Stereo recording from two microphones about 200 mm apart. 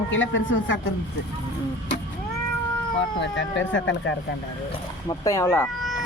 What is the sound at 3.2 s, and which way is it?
Speech, 65° left (ahead or behind).